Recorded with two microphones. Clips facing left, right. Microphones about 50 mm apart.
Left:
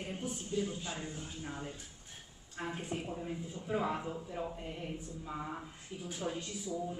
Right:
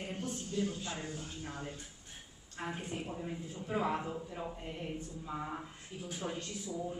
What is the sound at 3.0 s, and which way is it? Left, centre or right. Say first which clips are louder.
A man's voice: left 1 dB; centre.